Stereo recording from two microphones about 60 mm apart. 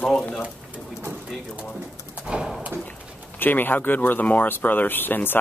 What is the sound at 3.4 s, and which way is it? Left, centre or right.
Speech, left.